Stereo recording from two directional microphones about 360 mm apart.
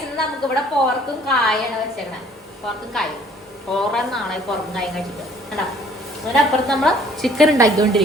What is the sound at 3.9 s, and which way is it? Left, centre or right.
A woman's voice, centre.